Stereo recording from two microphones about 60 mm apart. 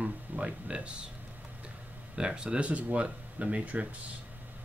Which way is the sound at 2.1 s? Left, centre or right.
Centre.